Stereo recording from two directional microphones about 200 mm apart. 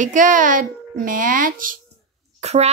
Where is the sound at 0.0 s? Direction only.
40° right (ahead or behind).